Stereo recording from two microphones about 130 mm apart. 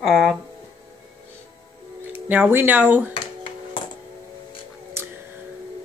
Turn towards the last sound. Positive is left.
turn(degrees=-20)  # may be behind; listen again after turning